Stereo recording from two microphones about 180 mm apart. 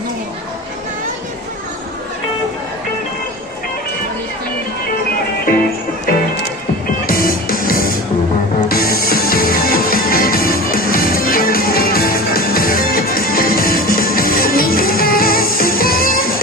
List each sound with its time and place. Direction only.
7.1 s music: 55° left (ahead or behind)